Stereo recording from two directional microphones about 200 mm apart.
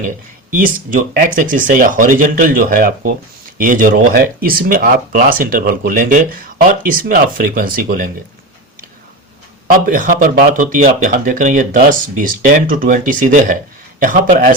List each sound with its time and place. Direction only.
0.9 s speech: 40° right (ahead or behind)
9.8 s speech: 40° right (ahead or behind)